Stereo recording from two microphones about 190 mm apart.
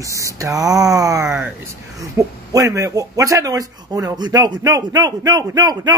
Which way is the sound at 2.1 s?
15° right (ahead or behind).